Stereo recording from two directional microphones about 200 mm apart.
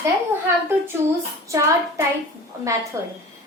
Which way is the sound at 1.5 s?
15° right (ahead or behind).